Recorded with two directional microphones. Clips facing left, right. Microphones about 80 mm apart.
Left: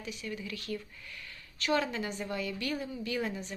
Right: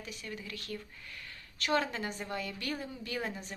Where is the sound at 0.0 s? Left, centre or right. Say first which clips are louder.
Left 4 dB; right.